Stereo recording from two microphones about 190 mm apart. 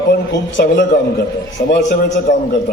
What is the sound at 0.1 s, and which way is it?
A man's voice, 65° left (ahead or behind).